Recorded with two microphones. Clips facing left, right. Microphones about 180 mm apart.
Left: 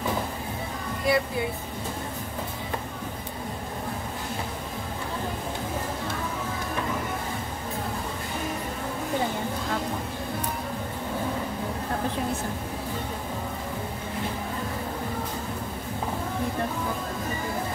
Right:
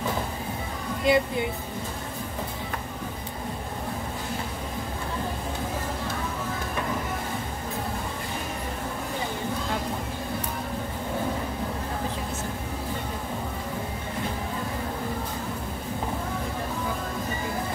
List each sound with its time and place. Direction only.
1.0 s speech: 20° right (ahead or behind)